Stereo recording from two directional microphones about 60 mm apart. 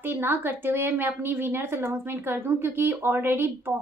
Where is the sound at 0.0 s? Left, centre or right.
Right.